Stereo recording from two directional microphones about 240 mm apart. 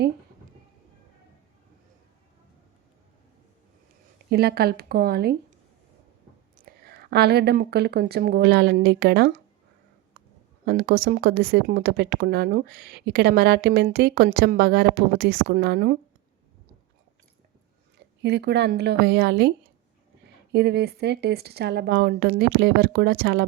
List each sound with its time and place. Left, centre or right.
4.3 s speech: right
6.6 s speech: right
10.7 s speech: right
17.9 s speech: right